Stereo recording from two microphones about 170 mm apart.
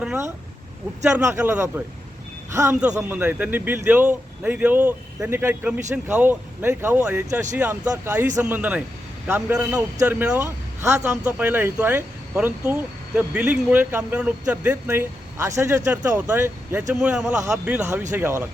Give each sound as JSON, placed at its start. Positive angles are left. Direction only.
{"t": 1.2, "sound": "a man's voice", "side_deg": -15}